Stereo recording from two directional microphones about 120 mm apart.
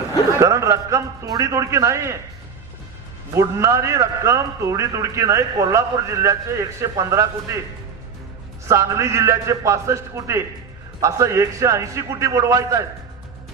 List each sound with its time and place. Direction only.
0.4 s a man's voice: 25° right (ahead or behind)
3.3 s a man's voice: 25° right (ahead or behind)
8.6 s a man's voice: 25° right (ahead or behind)